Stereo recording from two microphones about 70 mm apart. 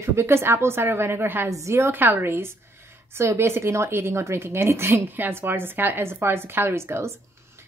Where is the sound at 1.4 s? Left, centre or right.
Right.